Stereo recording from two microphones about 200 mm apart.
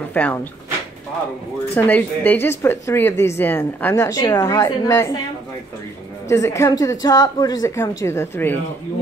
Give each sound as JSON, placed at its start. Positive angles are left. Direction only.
{"t": 0.1, "sound": "speech", "side_deg": 10}
{"t": 1.8, "sound": "a woman's voice", "side_deg": 10}
{"t": 6.2, "sound": "a woman's voice", "side_deg": 15}